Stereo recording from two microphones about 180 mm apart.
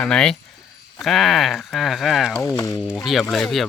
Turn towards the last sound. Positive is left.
turn(degrees=0)  # may be behind; listen again after turning